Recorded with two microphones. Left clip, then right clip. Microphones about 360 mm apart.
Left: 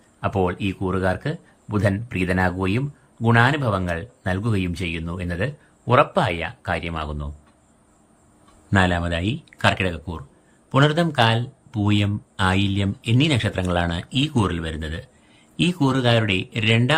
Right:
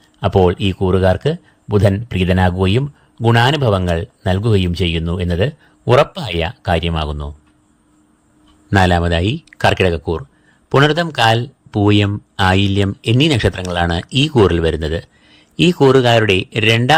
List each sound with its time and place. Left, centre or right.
0.4 s speech: centre
8.7 s speech: centre